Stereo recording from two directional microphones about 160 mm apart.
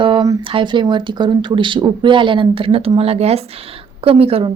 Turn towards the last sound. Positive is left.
turn(degrees=-35)  # may be behind; listen again after turning